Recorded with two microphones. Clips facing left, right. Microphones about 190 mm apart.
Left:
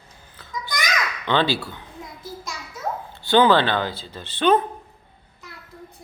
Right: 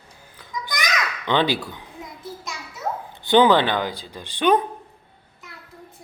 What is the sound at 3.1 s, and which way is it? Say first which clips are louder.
Speech: right 1 dB; 20° right (ahead or behind).